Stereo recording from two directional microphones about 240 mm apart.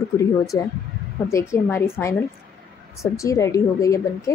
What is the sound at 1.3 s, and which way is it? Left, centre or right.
A woman's voice, centre.